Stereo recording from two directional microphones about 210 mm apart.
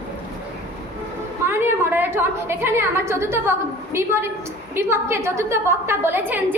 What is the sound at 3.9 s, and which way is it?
A woman's voice, 10° right (ahead or behind).